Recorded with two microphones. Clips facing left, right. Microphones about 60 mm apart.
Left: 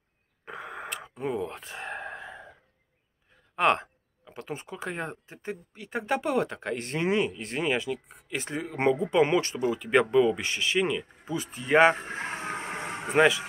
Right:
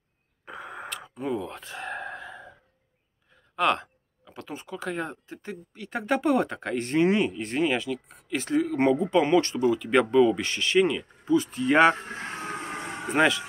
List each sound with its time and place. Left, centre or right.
0.5 s wheeze: left
1.0 s gasp: left
3.5 s speech: left
5.9 s speech: centre
13.1 s speech: centre